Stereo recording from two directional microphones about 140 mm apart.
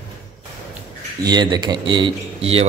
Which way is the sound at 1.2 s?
30° right (ahead or behind).